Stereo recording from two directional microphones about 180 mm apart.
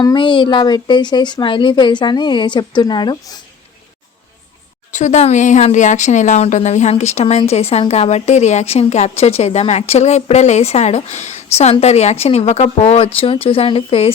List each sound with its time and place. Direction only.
0.0 s a woman's voice: 25° left (ahead or behind)
4.9 s speech: 40° left (ahead or behind)